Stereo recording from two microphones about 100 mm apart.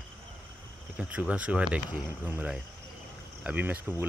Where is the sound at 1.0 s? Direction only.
15° right (ahead or behind).